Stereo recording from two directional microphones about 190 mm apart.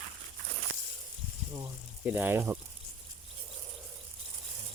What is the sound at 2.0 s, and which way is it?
Speech, 10° right (ahead or behind).